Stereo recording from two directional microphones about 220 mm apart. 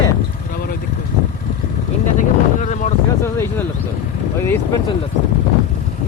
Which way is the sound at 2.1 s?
35° left (ahead or behind).